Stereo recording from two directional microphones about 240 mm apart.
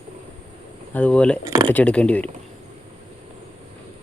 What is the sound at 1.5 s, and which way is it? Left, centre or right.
Speech, right.